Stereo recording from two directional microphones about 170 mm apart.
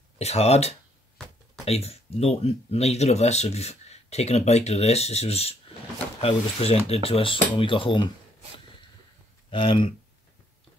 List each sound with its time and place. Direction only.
0.2 s speech: 40° left (ahead or behind)
9.5 s speech: 30° left (ahead or behind)